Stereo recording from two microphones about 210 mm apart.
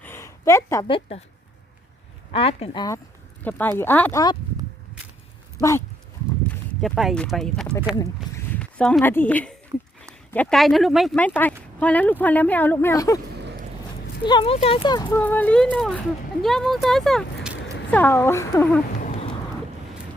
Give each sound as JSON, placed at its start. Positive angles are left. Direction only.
{"t": 0.0, "sound": "a sound", "side_deg": 10}
{"t": 0.9, "sound": "speech", "side_deg": 25}
{"t": 2.3, "sound": "a woman's voice", "side_deg": 25}
{"t": 5.6, "sound": "a woman's voice", "side_deg": 15}
{"t": 6.5, "sound": "a woman's voice", "side_deg": 0}
{"t": 13.3, "sound": "a sound", "side_deg": -55}
{"t": 14.3, "sound": "speech", "side_deg": 25}
{"t": 15.2, "sound": "speech", "side_deg": 10}
{"t": 17.9, "sound": "a woman's voice", "side_deg": 10}